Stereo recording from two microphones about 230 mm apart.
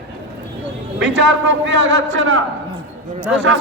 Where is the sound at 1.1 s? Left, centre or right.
Right.